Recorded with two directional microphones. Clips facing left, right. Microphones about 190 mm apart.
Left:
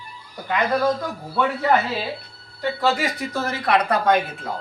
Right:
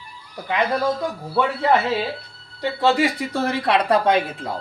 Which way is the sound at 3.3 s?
30° right (ahead or behind).